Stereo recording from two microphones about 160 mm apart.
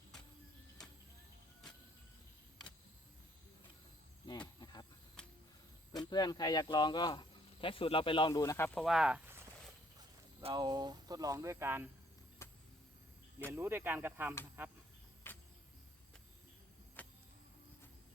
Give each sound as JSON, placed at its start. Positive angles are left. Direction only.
{"t": 4.3, "sound": "a sound", "side_deg": 25}
{"t": 5.9, "sound": "speech", "side_deg": 25}
{"t": 8.3, "sound": "speech", "side_deg": 20}
{"t": 8.8, "sound": "speech", "side_deg": -5}
{"t": 10.5, "sound": "speech", "side_deg": -25}
{"t": 12.4, "sound": "vehicle", "side_deg": 15}
{"t": 13.5, "sound": "speech", "side_deg": -15}
{"t": 15.3, "sound": "cricket", "side_deg": 15}
{"t": 17.0, "sound": "vehicle", "side_deg": 10}